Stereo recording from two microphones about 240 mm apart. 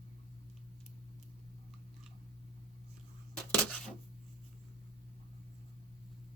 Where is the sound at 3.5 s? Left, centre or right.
Centre.